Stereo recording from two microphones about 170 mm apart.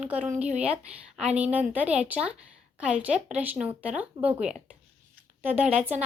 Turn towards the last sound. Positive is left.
turn(degrees=-10)  # may be behind; listen again after turning